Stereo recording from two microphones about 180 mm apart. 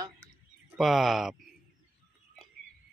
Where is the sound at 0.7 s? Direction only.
Centre (ahead or behind).